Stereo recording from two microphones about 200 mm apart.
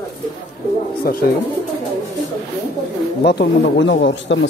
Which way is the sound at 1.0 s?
50° left (ahead or behind).